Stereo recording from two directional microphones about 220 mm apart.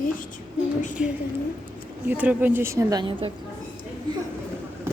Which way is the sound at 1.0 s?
5° right (ahead or behind).